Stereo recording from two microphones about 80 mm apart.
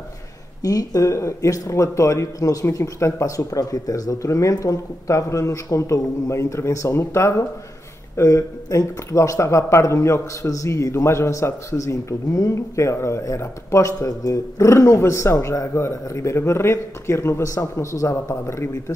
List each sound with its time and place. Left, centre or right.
0.6 s speech: left